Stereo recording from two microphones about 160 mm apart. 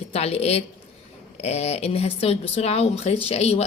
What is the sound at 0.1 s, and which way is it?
Speech, 40° left (ahead or behind).